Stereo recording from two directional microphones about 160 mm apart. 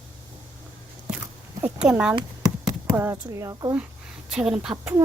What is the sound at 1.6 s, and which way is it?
Speech, 5° right (ahead or behind).